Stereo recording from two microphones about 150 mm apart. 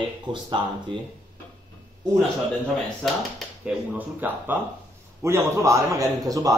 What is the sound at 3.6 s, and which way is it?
A man's voice, 10° right (ahead or behind).